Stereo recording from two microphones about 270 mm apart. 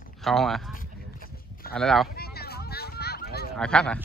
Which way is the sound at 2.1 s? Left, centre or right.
Left.